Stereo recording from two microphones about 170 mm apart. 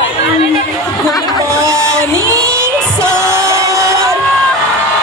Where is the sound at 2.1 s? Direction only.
20° right (ahead or behind).